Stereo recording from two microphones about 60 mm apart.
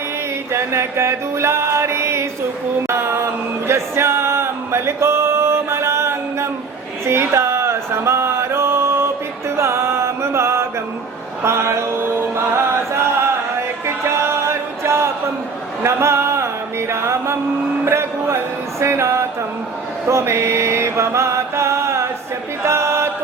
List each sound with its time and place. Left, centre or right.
0.5 s music: right
2.8 s a sound: right
3.7 s music: right
7.0 s a sound: right
9.6 s music: right
11.4 s chant: right
13.8 s a sound: right
15.8 s a man's voice: right
16.9 s music: right
17.8 s a sound: right
18.8 s music: right
20.1 s mantra: right
22.6 s chant: right